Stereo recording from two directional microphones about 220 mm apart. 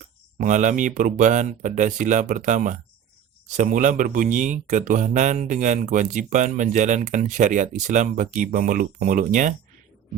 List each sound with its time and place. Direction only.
0.0 s speech: 35° right (ahead or behind)